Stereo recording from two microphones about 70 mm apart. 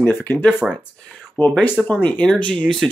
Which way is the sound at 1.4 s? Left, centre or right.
Left.